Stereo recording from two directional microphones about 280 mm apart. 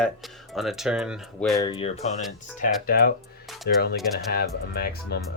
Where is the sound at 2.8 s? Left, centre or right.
Left.